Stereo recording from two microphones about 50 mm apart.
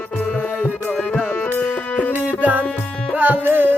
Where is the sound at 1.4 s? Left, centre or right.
Left.